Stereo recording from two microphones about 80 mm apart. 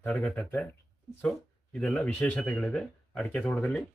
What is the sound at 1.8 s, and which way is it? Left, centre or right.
Speech, centre.